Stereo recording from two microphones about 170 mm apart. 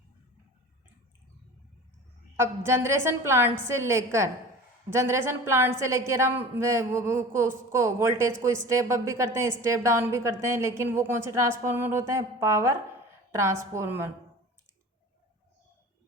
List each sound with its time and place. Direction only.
2.3 s a woman's voice: 15° right (ahead or behind)